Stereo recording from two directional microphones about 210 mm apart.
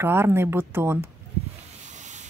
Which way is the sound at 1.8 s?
35° right (ahead or behind).